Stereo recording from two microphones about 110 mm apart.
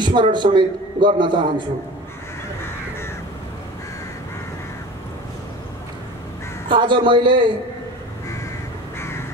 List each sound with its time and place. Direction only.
0.0 s a man's voice: 45° right (ahead or behind)
6.7 s a man's voice: 45° right (ahead or behind)